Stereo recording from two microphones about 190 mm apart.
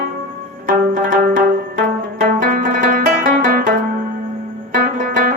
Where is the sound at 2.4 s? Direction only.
45° right (ahead or behind).